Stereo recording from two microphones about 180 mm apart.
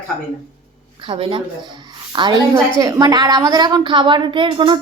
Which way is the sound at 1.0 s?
30° right (ahead or behind).